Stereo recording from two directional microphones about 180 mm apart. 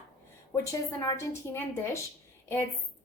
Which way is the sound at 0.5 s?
20° left (ahead or behind).